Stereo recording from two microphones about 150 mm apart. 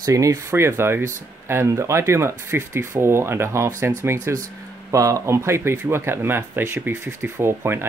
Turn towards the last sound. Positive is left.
turn(degrees=-15)  # may be behind; listen again after turning